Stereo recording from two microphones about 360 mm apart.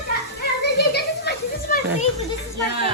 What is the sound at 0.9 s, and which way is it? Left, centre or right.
Children playing, left.